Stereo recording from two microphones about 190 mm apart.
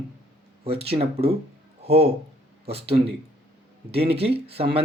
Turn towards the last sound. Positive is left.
turn(degrees=-30)  # may be behind; listen again after turning